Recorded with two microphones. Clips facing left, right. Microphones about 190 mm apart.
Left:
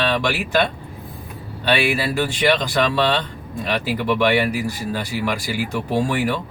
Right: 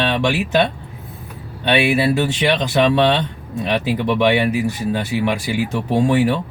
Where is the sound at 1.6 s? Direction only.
20° right (ahead or behind).